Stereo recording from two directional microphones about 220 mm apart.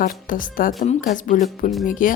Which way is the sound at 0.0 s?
40° left (ahead or behind).